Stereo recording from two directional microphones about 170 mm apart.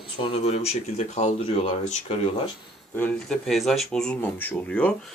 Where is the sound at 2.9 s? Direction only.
10° left (ahead or behind).